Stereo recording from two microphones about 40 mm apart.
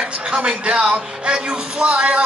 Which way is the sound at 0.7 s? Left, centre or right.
Right.